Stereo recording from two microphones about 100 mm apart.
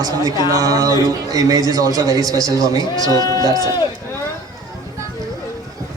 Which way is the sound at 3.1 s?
40° left (ahead or behind).